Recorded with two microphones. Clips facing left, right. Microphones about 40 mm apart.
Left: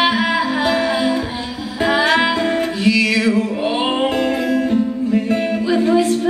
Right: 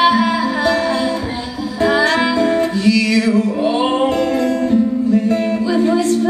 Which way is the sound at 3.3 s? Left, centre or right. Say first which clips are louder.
Right 2 dB; centre.